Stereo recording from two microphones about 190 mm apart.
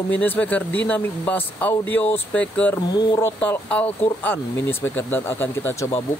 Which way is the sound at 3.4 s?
10° left (ahead or behind).